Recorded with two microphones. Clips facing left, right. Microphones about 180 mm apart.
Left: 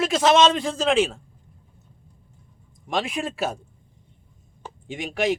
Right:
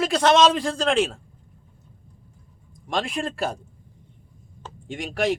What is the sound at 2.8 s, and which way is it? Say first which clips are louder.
Speech: even; 5° left (ahead or behind).